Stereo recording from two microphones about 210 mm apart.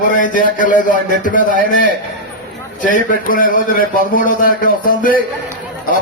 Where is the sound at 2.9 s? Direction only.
40° left (ahead or behind).